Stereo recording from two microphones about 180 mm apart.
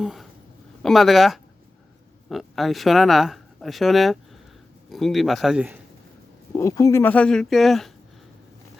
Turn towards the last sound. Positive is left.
turn(degrees=0)  # may be behind; listen again after turning